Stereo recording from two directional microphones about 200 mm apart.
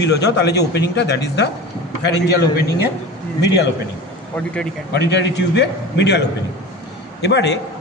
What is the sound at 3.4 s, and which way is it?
Speech, 60° left (ahead or behind).